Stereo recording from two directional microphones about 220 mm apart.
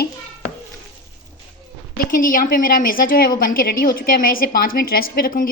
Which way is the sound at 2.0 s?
40° left (ahead or behind).